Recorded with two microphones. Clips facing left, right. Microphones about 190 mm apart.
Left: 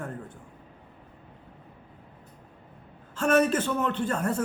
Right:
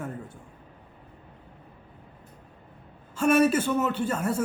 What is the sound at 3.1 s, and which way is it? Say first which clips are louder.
A man's voice: right 2 dB; 10° right (ahead or behind).